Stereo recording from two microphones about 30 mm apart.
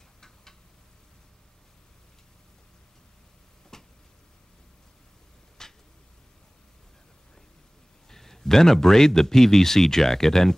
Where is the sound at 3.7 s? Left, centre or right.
Centre.